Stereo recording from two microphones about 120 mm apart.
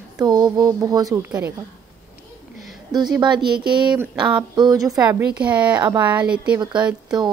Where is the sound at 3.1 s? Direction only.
40° right (ahead or behind).